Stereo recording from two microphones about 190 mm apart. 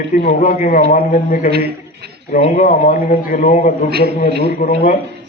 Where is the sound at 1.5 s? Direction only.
55° right (ahead or behind).